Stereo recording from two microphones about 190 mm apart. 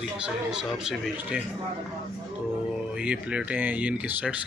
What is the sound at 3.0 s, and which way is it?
Speech, 5° right (ahead or behind).